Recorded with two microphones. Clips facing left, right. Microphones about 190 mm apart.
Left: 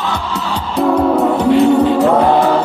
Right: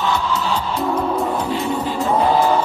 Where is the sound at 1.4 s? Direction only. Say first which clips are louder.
Left 11 dB; 70° left (ahead or behind).